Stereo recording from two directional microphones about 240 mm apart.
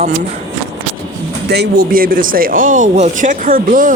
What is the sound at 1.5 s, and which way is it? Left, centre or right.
Speech, right.